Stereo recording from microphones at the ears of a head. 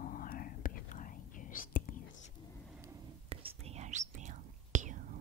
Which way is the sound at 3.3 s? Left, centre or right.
Right.